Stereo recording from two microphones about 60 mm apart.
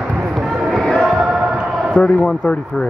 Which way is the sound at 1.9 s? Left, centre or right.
Left.